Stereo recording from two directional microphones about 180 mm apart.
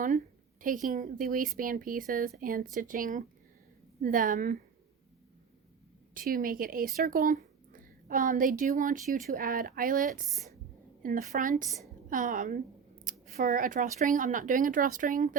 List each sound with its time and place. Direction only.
0.6 s speech: 45° right (ahead or behind)
6.1 s speech: 50° right (ahead or behind)